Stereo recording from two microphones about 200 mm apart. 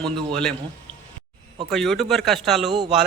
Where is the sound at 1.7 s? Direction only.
Centre (ahead or behind).